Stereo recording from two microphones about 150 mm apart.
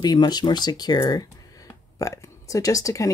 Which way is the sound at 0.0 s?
25° left (ahead or behind).